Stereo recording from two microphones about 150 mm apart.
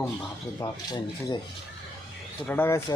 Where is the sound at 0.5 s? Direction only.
25° left (ahead or behind).